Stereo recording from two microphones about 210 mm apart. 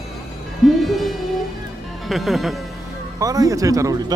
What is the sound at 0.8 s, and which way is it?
Music, centre (ahead or behind).